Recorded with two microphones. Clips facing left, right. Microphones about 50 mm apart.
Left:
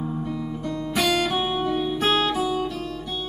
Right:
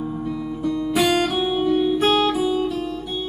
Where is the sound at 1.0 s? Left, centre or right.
Right.